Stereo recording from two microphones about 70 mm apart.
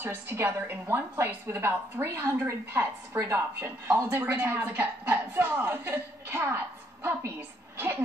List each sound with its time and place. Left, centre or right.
0.0 s a woman's voice: right